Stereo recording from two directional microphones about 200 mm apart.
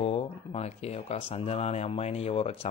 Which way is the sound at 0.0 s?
30° left (ahead or behind).